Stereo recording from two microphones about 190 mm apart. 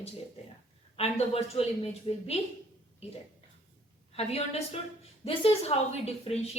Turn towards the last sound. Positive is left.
turn(degrees=35)  # may be behind; listen again after turning